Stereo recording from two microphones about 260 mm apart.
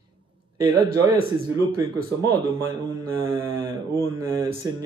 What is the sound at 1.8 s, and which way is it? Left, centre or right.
Speech, centre.